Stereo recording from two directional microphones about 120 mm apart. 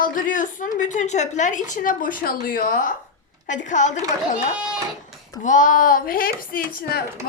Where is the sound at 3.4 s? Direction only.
90° left.